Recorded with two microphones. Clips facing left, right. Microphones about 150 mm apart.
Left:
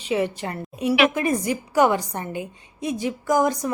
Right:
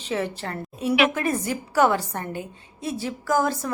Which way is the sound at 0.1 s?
15° left (ahead or behind).